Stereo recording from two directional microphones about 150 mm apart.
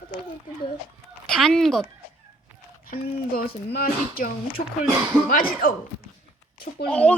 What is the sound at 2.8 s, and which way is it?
Speech, 80° left.